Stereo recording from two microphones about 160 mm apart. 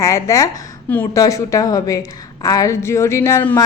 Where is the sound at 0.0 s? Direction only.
20° left (ahead or behind).